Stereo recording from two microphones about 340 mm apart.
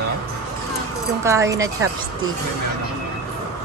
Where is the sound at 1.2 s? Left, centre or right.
Centre.